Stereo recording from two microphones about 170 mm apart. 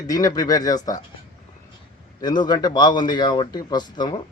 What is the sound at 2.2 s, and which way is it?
A man's voice, 25° left (ahead or behind).